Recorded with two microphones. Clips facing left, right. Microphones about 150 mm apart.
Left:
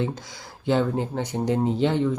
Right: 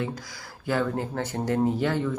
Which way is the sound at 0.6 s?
25° left (ahead or behind).